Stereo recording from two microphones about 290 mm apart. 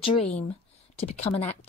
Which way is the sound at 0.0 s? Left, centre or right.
Centre.